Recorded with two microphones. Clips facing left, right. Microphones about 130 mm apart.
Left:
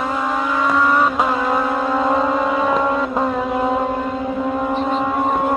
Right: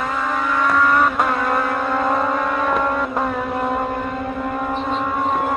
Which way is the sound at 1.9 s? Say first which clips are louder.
Left 2 dB; 5° left (ahead or behind).